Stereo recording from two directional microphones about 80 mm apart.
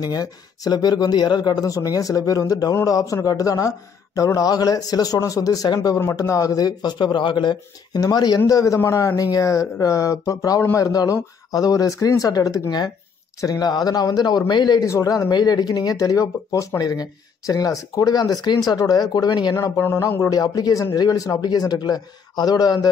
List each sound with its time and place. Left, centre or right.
0.0 s speech: left
8.0 s speech: left
8.5 s speech: left
10.6 s speech: left
10.9 s speech: left
14.9 s speech: left
19.8 s speech: left
20.3 s speech: left